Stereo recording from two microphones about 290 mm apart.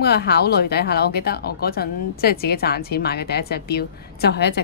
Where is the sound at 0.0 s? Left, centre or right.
Left.